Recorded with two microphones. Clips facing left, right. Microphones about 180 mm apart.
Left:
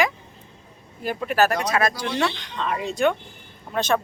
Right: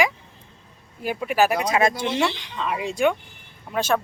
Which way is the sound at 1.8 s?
25° right (ahead or behind).